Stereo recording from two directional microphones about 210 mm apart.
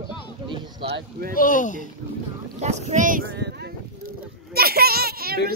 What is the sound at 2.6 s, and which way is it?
Speech, 35° right (ahead or behind).